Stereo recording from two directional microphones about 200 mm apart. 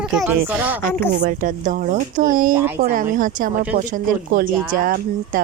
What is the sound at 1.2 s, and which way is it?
Speech, 40° right (ahead or behind).